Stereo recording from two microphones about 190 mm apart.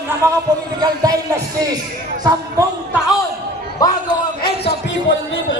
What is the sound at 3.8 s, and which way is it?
Speech, 20° left (ahead or behind).